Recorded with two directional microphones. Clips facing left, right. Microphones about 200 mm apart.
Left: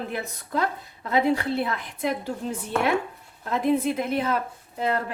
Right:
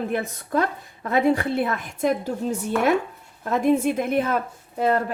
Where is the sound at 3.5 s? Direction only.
45° right (ahead or behind).